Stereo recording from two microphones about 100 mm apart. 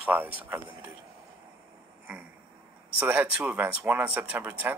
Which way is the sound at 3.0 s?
15° right (ahead or behind).